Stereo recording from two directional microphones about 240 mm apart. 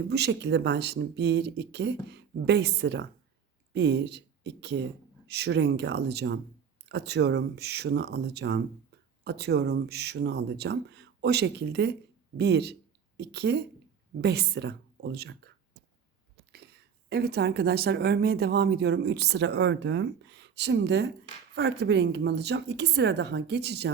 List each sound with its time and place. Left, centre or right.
0.1 s speech: right
17.1 s speech: right